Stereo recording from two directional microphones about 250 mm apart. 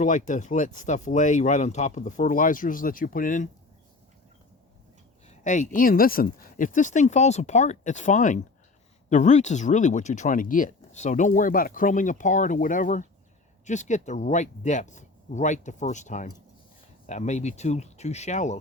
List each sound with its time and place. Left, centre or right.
0.0 s speech: left
5.3 s speech: left